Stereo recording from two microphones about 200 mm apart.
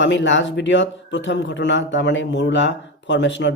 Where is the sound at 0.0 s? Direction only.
65° left (ahead or behind).